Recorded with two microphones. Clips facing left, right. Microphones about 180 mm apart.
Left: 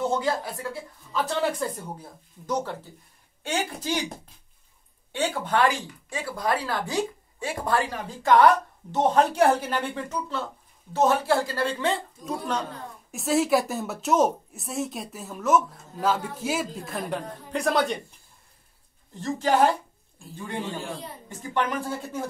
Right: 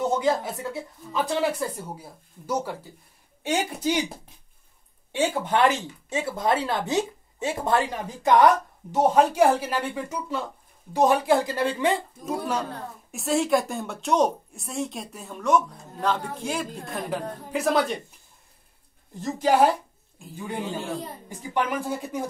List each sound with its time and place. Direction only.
0.1 s speech: 20° right (ahead or behind)
3.8 s speech: 10° right (ahead or behind)
5.1 s speech: 20° right (ahead or behind); by 18.0 s centre (ahead or behind)
19.1 s speech: 10° right (ahead or behind)